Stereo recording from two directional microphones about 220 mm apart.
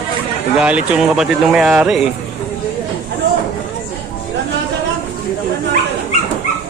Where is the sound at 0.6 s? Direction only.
5° right (ahead or behind).